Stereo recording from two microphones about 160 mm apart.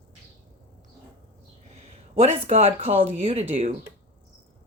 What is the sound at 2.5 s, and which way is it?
Speech, 40° right (ahead or behind).